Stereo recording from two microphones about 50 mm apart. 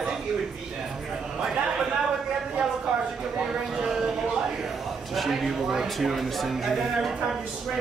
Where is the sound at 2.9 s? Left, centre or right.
Right.